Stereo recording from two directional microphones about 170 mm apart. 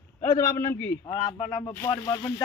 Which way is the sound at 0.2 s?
15° left (ahead or behind).